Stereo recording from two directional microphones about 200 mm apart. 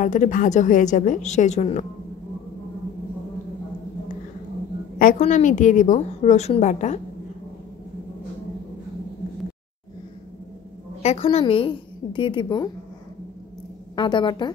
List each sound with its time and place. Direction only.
0.0 s a woman's voice: 40° left (ahead or behind)
5.2 s a woman's voice: 40° left (ahead or behind)
11.0 s a woman's voice: 30° left (ahead or behind)
13.9 s a woman's voice: 25° left (ahead or behind)